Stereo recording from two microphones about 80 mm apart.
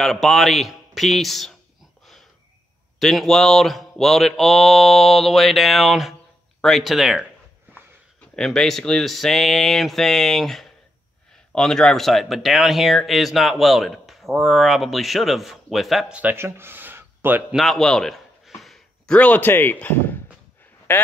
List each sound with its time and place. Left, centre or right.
0.0 s speech: centre
3.0 s speech: centre
8.4 s speech: centre
16.1 s a man's voice: centre
16.3 s a sound: right
17.6 s a sound: centre
19.1 s speech: centre